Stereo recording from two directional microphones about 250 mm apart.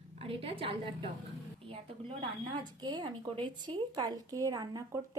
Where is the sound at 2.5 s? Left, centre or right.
Centre.